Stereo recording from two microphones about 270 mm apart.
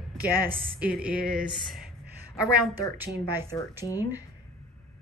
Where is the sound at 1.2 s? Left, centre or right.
Right.